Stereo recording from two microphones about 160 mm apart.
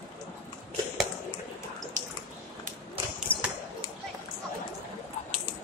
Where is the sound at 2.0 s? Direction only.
50° right (ahead or behind).